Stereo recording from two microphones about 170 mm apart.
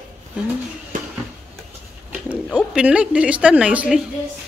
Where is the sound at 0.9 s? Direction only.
50° right (ahead or behind).